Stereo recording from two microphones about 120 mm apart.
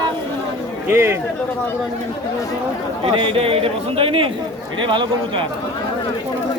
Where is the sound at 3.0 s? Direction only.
50° right (ahead or behind).